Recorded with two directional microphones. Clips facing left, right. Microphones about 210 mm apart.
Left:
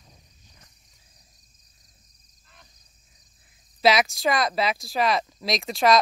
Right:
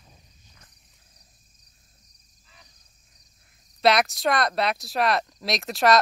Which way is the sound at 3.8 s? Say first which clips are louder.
Even; centre (ahead or behind).